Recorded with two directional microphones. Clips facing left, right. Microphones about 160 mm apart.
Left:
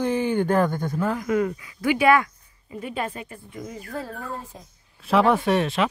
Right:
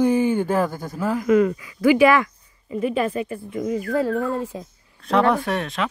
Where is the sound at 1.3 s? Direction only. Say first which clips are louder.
Right 6 dB; 90° right.